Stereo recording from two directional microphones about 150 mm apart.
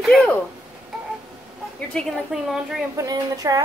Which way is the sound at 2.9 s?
25° right (ahead or behind).